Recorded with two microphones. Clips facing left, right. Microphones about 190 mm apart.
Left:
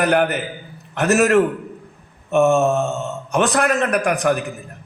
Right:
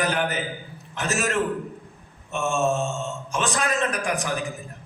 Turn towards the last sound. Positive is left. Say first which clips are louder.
# left 8 dB
turn(degrees=60)  # may be behind; listen again after turning